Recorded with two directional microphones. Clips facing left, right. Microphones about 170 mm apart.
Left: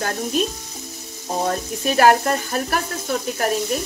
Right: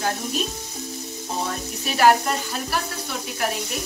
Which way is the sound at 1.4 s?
50° left (ahead or behind).